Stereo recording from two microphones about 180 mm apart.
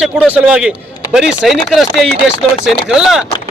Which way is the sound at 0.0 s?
5° right (ahead or behind).